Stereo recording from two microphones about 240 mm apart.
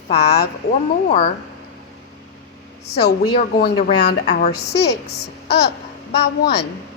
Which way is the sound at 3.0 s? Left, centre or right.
Left.